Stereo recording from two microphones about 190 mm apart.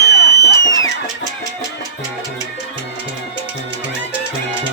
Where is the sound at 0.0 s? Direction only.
60° left (ahead or behind).